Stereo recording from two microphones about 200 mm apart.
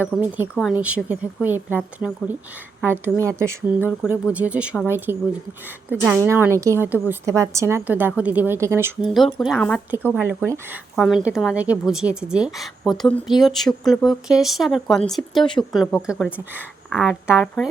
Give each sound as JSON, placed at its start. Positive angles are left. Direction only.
{"t": 0.2, "sound": "speech", "side_deg": -10}
{"t": 9.0, "sound": "a woman's voice", "side_deg": 0}
{"t": 10.2, "sound": "speech", "side_deg": -15}
{"t": 10.9, "sound": "a woman's voice", "side_deg": 0}
{"t": 17.3, "sound": "speech", "side_deg": 10}